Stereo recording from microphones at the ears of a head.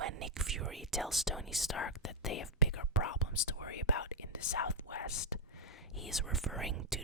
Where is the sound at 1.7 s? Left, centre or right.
Left.